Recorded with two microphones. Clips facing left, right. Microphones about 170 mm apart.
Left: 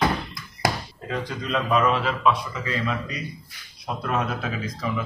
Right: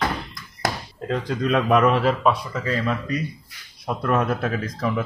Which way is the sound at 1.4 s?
60° right (ahead or behind).